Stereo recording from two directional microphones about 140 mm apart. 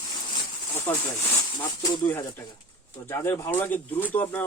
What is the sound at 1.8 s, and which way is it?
Speech, 30° left (ahead or behind).